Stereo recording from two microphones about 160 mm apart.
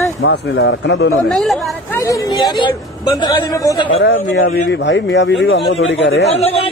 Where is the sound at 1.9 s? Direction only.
20° left (ahead or behind).